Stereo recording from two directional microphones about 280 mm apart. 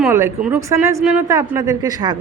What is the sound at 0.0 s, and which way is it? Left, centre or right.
A woman's voice, centre.